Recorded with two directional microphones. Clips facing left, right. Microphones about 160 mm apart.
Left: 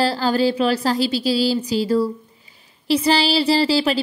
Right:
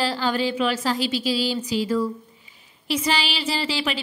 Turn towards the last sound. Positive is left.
turn(degrees=35)  # may be behind; listen again after turning